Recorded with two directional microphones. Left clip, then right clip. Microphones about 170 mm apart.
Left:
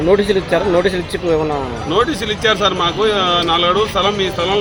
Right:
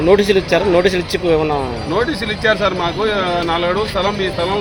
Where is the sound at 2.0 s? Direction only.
30° left (ahead or behind).